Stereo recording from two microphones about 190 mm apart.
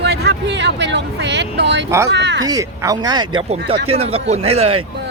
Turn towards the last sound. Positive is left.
turn(degrees=-30)  # may be behind; listen again after turning